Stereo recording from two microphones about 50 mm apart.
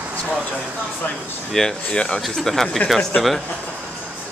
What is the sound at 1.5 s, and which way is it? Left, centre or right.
Speech, centre.